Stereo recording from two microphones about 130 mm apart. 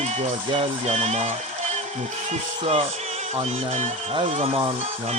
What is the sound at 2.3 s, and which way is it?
Speech, 50° right (ahead or behind).